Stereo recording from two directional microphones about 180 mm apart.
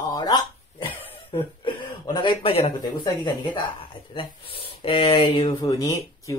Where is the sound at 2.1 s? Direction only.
30° left (ahead or behind).